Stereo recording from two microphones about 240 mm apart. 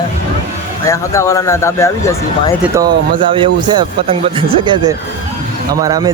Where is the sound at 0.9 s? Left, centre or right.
Centre.